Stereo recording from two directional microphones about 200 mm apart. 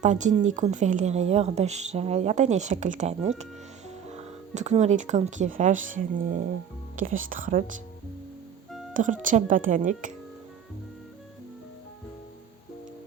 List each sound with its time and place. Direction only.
0.0 s a woman's voice: 35° right (ahead or behind)
8.9 s a woman's voice: 40° right (ahead or behind)